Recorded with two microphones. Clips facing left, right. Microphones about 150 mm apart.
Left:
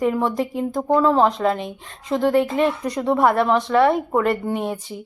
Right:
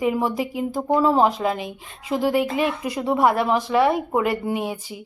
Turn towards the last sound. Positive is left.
turn(degrees=-5)  # may be behind; listen again after turning